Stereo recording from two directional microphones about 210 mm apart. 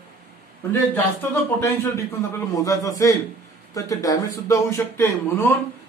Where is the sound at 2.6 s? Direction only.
15° left (ahead or behind).